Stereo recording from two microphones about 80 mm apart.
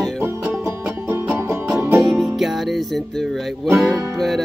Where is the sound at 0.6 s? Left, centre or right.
Right.